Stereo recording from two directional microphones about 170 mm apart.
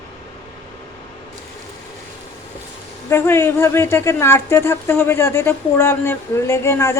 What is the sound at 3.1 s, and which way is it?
Speech, 15° left (ahead or behind).